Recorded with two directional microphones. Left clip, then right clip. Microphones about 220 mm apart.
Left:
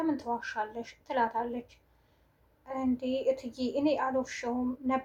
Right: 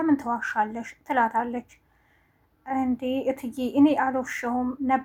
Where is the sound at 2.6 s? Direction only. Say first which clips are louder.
Right 6 dB; 35° right (ahead or behind).